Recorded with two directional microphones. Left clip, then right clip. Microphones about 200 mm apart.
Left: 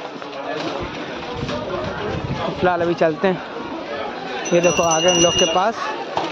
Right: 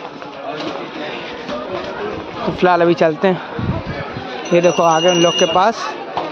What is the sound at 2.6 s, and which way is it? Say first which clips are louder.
Speech: right 5 dB; 25° right (ahead or behind).